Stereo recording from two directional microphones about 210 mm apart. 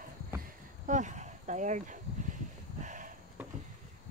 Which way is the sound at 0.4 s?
35° right (ahead or behind).